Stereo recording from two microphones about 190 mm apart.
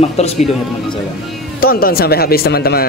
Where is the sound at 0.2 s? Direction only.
35° left (ahead or behind).